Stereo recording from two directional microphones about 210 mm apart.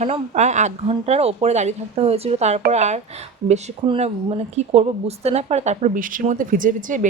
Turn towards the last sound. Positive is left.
turn(degrees=-40)  # may be behind; listen again after turning